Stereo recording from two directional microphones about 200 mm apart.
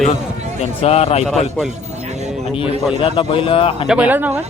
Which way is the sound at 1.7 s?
35° right (ahead or behind).